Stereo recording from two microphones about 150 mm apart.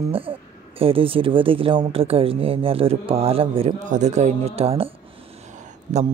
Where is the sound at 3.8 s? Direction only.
50° right (ahead or behind).